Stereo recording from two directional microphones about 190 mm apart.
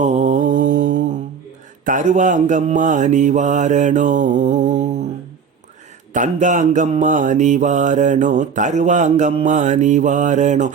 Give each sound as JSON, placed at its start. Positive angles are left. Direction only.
{"t": 0.0, "sound": "mantra", "side_deg": -40}
{"t": 6.1, "sound": "mantra", "side_deg": -40}